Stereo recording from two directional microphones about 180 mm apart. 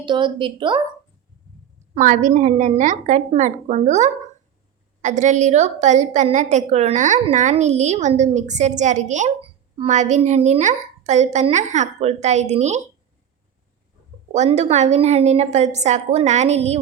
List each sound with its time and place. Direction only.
0.0 s a woman's voice: 25° right (ahead or behind)
2.0 s a woman's voice: 45° right (ahead or behind)
14.3 s a woman's voice: 40° right (ahead or behind)